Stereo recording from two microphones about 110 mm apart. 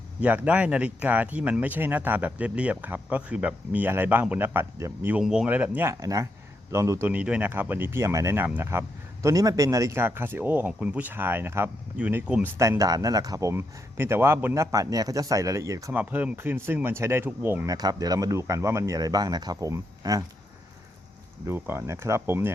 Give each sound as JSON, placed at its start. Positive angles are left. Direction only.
{"t": 0.2, "sound": "speech", "side_deg": -10}
{"t": 5.2, "sound": "speech", "side_deg": -5}
{"t": 5.5, "sound": "speech", "side_deg": -15}
{"t": 7.1, "sound": "speech", "side_deg": -15}
{"t": 12.6, "sound": "speech", "side_deg": -30}
{"t": 15.9, "sound": "speech", "side_deg": -15}
{"t": 17.7, "sound": "speech", "side_deg": -35}
{"t": 21.4, "sound": "speech", "side_deg": -20}